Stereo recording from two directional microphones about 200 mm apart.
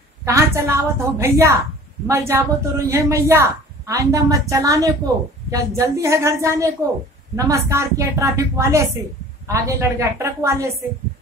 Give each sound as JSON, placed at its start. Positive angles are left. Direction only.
{"t": 0.2, "sound": "a woman's voice", "side_deg": -15}